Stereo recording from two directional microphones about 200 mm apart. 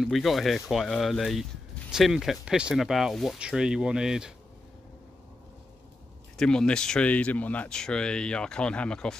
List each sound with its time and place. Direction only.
0.0 s speech: centre (ahead or behind)
6.3 s speech: 5° left (ahead or behind)